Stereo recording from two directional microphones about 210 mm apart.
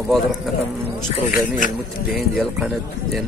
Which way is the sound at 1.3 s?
40° left (ahead or behind).